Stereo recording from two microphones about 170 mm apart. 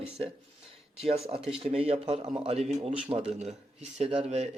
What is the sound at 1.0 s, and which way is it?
Speech, 35° right (ahead or behind).